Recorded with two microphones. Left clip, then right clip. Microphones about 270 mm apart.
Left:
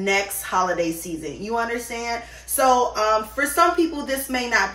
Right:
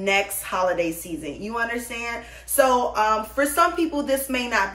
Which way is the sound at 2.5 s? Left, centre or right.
Centre.